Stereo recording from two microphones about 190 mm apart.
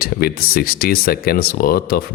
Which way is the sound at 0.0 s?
50° left (ahead or behind).